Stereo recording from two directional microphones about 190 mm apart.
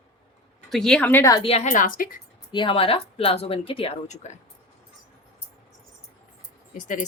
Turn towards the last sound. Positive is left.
turn(degrees=40)  # may be behind; listen again after turning